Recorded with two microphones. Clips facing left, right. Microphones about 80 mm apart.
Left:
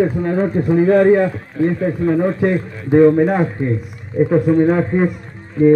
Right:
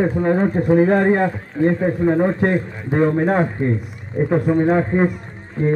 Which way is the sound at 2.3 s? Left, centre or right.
Right.